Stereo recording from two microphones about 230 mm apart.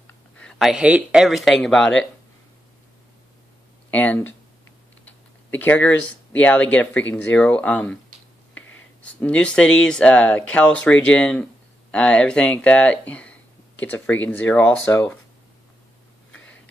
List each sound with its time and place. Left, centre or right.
0.0 s speech: centre
3.9 s speech: centre
8.6 s a sound: left
9.2 s speech: centre